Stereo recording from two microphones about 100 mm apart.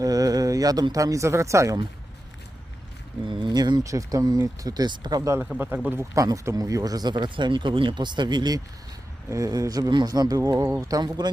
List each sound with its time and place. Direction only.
0.0 s a sound: 35° right (ahead or behind)
0.9 s speech: 35° right (ahead or behind)
3.2 s speech: 55° right (ahead or behind)
5.5 s a man's voice: 15° right (ahead or behind)
6.1 s speech: 35° right (ahead or behind)
10.6 s a man's voice: 25° right (ahead or behind)
10.8 s speech: 40° right (ahead or behind)